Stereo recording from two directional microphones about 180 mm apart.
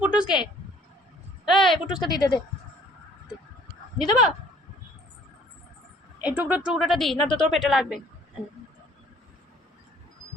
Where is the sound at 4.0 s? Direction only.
Centre (ahead or behind).